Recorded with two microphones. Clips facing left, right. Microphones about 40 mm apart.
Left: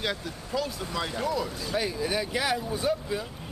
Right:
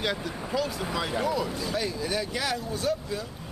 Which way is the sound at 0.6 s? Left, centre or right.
Centre.